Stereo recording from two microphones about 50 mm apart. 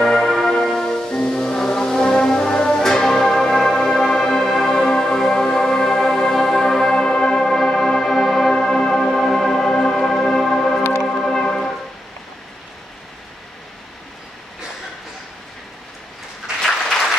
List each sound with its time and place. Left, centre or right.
0.0 s music: centre